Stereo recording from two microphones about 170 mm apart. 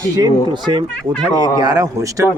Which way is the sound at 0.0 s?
20° right (ahead or behind).